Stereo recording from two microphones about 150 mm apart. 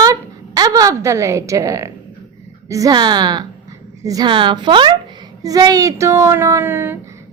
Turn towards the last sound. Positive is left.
turn(degrees=-15)  # may be behind; listen again after turning